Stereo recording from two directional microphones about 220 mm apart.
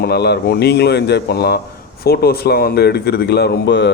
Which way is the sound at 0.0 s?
45° left (ahead or behind).